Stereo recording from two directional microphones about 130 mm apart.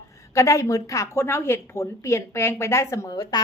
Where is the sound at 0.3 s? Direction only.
25° left (ahead or behind).